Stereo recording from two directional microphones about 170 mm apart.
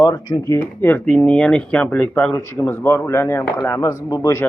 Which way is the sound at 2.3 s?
15° left (ahead or behind).